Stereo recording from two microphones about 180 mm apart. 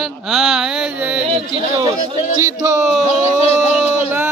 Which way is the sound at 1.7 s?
20° right (ahead or behind).